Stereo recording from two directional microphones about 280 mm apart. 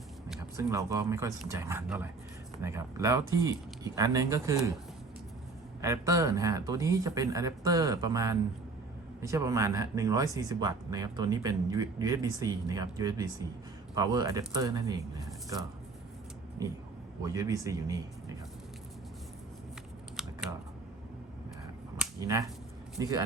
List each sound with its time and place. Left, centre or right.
0.3 s speech: centre
5.8 s speech: centre
17.2 s speech: centre
20.2 s scissors: centre
21.9 s a sound: centre
23.0 s speech: centre